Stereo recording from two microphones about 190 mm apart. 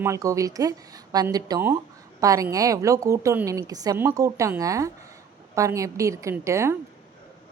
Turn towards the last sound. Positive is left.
turn(degrees=-15)  # may be behind; listen again after turning